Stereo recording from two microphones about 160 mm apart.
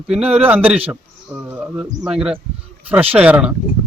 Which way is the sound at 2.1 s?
5° right (ahead or behind).